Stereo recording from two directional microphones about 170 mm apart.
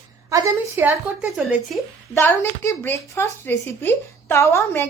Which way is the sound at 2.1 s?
15° left (ahead or behind).